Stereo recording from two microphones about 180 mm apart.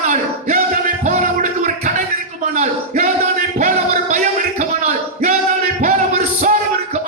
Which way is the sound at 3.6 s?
40° right (ahead or behind).